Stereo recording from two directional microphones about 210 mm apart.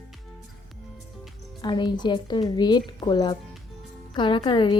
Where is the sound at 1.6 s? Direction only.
20° left (ahead or behind).